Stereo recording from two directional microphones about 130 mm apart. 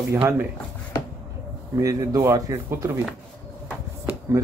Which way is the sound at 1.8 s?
25° right (ahead or behind).